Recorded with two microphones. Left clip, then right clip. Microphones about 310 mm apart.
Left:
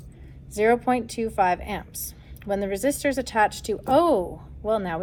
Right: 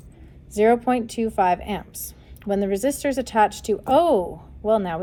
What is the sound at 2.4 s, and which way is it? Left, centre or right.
A woman's voice, right.